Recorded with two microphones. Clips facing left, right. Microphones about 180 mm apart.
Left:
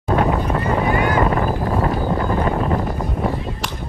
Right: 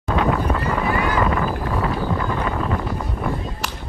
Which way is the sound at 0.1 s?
35° left (ahead or behind).